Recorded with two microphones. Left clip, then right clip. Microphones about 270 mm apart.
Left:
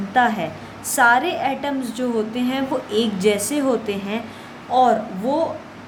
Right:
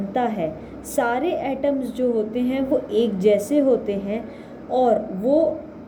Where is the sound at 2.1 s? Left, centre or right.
Centre.